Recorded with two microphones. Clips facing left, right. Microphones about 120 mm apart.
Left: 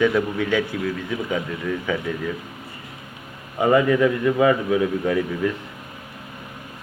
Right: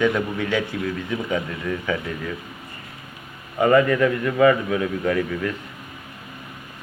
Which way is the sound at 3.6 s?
10° left (ahead or behind).